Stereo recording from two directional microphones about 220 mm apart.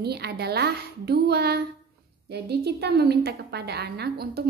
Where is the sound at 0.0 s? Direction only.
45° right (ahead or behind).